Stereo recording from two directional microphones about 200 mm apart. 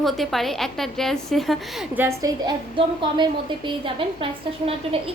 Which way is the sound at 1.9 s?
15° right (ahead or behind).